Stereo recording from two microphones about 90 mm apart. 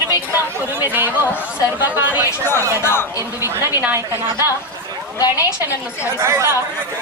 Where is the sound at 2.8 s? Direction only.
25° left (ahead or behind).